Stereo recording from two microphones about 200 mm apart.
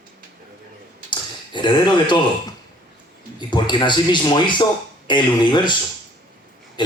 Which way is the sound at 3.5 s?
25° left (ahead or behind).